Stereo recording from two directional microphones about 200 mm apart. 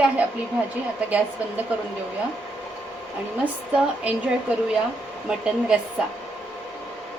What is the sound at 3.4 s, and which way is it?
A woman's voice, 5° right (ahead or behind).